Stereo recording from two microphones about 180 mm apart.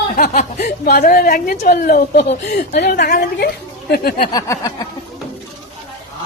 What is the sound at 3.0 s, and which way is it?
A woman's voice, 60° left (ahead or behind).